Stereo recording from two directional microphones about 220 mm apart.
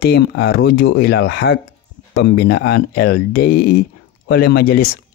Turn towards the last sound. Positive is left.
turn(degrees=45)  # may be behind; listen again after turning